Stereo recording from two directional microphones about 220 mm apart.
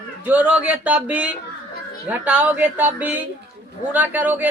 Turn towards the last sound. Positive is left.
turn(degrees=-5)  # may be behind; listen again after turning